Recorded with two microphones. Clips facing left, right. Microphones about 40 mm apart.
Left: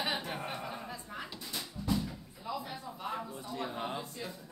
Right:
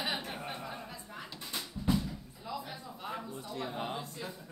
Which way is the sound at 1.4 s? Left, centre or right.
Right.